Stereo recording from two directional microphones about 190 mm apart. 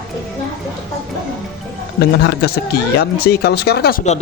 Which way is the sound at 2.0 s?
55° left (ahead or behind).